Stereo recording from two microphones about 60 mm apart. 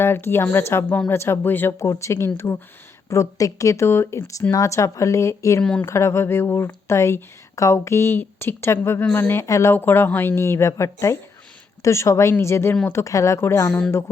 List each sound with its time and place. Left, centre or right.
0.0 s speech: left
1.5 s speech: left
1.8 s speech: left
3.1 s speech: left
3.8 s speech: left
4.5 s speech: left
9.0 s speech: left
9.5 s speech: left
9.7 s speech: left